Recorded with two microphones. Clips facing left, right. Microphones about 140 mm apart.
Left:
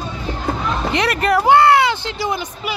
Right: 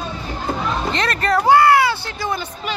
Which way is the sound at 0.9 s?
15° left (ahead or behind).